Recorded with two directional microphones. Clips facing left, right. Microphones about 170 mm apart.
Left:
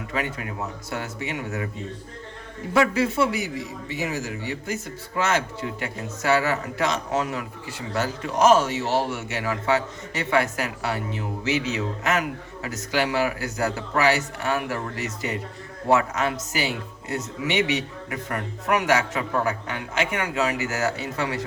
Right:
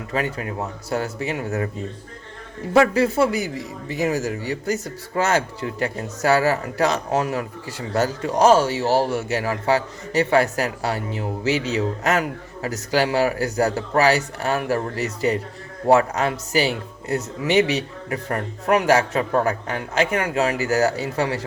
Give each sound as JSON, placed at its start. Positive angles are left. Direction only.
{"t": 0.1, "sound": "a man's voice", "side_deg": -35}
{"t": 2.7, "sound": "a man's voice", "side_deg": -40}